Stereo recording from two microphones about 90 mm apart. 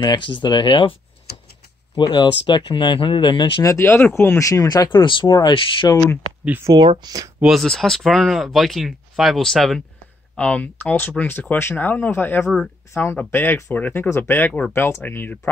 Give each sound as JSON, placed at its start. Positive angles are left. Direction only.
{"t": 0.0, "sound": "speech", "side_deg": 60}
{"t": 2.0, "sound": "speech", "side_deg": 60}
{"t": 3.6, "sound": "speech", "side_deg": 30}
{"t": 4.8, "sound": "speech", "side_deg": 55}
{"t": 5.5, "sound": "speech", "side_deg": 75}
{"t": 6.7, "sound": "speech", "side_deg": -50}
{"t": 7.6, "sound": "speech", "side_deg": 5}
{"t": 10.3, "sound": "speech", "side_deg": 15}